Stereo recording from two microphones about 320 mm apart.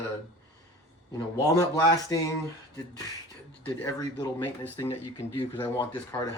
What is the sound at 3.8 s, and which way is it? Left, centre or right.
Speech, centre.